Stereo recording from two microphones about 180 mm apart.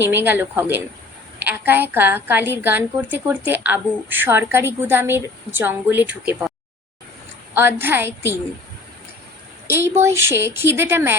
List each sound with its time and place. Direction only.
0.0 s a woman's voice: 10° right (ahead or behind)
7.5 s a woman's voice: 10° right (ahead or behind)
9.6 s a woman's voice: 15° right (ahead or behind)